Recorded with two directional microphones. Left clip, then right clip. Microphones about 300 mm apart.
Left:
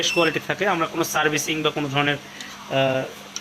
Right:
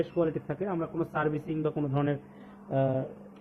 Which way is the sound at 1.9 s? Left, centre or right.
Centre.